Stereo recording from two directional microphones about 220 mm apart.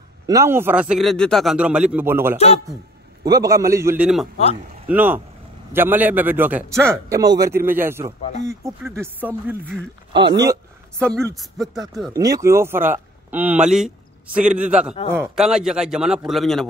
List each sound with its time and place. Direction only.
0.3 s a man's voice: 10° right (ahead or behind)
2.3 s a man's voice: 30° left (ahead or behind)
3.3 s a man's voice: 15° right (ahead or behind)
10.1 s a man's voice: 20° right (ahead or behind)
11.0 s a man's voice: 5° left (ahead or behind)
12.1 s a man's voice: 15° right (ahead or behind); by 16.6 s centre (ahead or behind)